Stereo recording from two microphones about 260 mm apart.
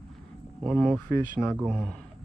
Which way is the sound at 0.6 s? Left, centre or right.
Centre.